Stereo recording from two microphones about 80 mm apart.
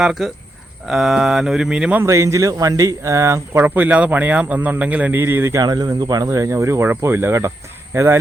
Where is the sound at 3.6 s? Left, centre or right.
Right.